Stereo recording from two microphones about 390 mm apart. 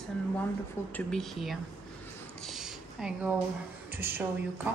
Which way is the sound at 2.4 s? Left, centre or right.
Centre.